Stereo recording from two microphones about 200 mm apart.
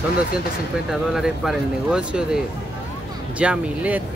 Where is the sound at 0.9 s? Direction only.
Centre (ahead or behind).